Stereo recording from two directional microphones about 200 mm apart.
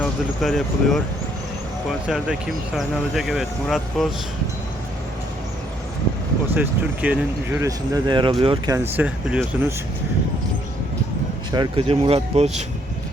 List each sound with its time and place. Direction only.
0.0 s speech: centre (ahead or behind)
6.5 s speech: 5° right (ahead or behind)
11.5 s speech: 25° right (ahead or behind)